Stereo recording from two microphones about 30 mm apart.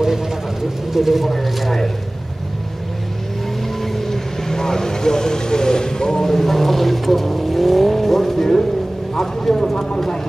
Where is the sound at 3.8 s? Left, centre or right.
Centre.